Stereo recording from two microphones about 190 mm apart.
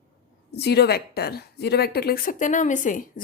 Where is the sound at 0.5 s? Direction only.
60° left (ahead or behind).